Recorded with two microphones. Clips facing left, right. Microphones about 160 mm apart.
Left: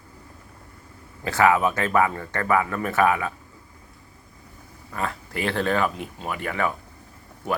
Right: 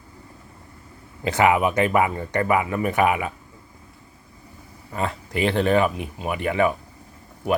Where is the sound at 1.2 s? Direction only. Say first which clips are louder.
Right 1 dB; 20° right (ahead or behind).